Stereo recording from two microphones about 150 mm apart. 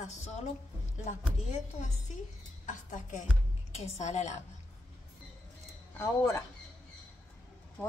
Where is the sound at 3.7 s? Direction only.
45° left (ahead or behind).